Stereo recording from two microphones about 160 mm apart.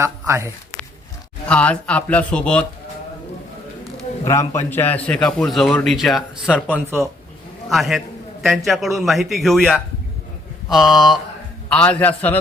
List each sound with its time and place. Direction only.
0.0 s speech: 15° right (ahead or behind)
1.5 s speech: 5° left (ahead or behind)
4.3 s a man's voice: 15° left (ahead or behind)